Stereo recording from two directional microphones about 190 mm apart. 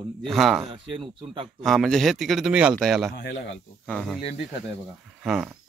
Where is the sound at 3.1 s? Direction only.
60° left (ahead or behind).